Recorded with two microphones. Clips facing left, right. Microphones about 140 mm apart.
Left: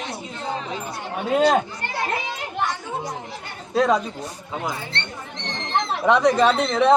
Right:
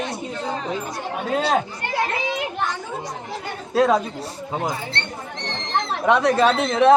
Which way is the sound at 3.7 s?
Centre (ahead or behind).